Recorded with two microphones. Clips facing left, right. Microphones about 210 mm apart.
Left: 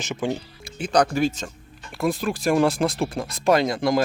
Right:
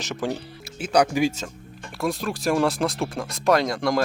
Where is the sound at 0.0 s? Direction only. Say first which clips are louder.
Left 1 dB; centre (ahead or behind).